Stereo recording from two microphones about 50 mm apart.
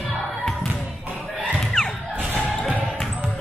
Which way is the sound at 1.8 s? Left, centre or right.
Centre.